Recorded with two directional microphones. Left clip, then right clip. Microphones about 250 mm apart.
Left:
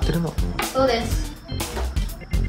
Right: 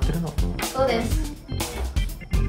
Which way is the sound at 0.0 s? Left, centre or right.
Centre.